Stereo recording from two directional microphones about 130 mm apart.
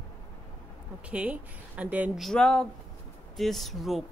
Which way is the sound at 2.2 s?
5° left (ahead or behind).